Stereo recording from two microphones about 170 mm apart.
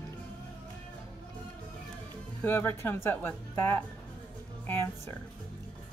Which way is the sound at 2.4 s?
15° left (ahead or behind).